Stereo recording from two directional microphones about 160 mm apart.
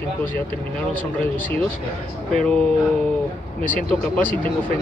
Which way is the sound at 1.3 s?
10° left (ahead or behind).